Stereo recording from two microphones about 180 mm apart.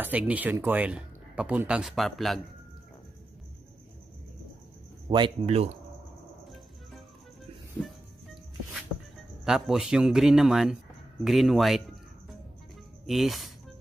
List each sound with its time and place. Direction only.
0.0 s speech: 10° right (ahead or behind)
5.0 s speech: 30° right (ahead or behind)
9.4 s a man's voice: centre (ahead or behind)
13.0 s speech: centre (ahead or behind)